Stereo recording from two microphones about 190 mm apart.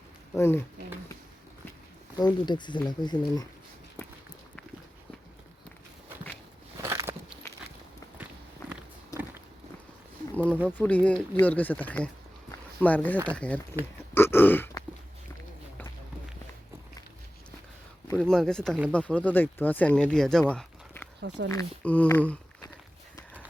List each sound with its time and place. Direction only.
0.3 s speech: 15° left (ahead or behind)
2.1 s speech: 25° left (ahead or behind)
6.8 s biting: 15° right (ahead or behind)
8.2 s walk: 5° right (ahead or behind)
9.1 s walk: 15° left (ahead or behind)
10.8 s speech: 5° left (ahead or behind)
12.5 s a sound: 10° left (ahead or behind)
13.2 s speech: 5° left (ahead or behind)
14.1 s grunt: 10° left (ahead or behind)
18.2 s speech: 5° left (ahead or behind)
21.2 s speech: 70° right (ahead or behind)
21.5 s speech: 10° left (ahead or behind)